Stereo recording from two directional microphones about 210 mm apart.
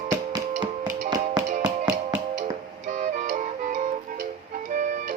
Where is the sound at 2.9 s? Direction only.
35° right (ahead or behind).